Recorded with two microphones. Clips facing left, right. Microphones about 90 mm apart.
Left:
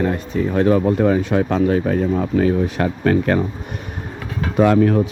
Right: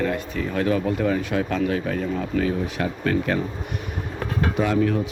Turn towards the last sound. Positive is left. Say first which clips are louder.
# left 7 dB
turn(degrees=45)  # may be behind; listen again after turning